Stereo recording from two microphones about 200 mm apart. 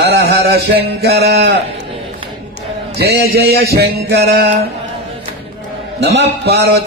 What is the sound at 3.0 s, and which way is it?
A man's voice, 50° right (ahead or behind).